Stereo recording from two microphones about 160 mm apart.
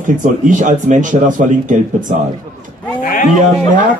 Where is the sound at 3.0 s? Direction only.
55° left (ahead or behind).